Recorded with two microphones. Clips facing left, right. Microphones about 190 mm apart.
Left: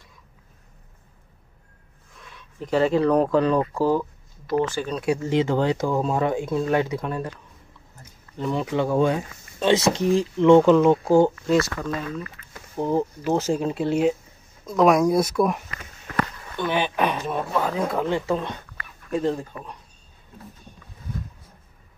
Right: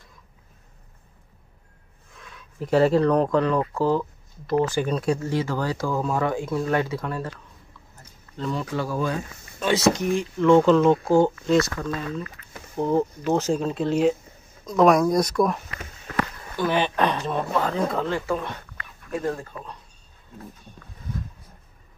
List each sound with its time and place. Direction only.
2.3 s speech: 5° right (ahead or behind)
4.6 s speech: 15° right (ahead or behind)
4.9 s speech: 5° left (ahead or behind)
5.3 s speech: 20° left (ahead or behind)
10.4 s speech: 15° left (ahead or behind)
12.7 s speech: 10° left (ahead or behind)
18.0 s speech: 20° left (ahead or behind)